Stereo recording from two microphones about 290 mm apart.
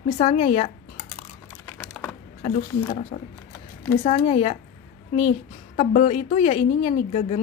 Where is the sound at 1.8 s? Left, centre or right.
Centre.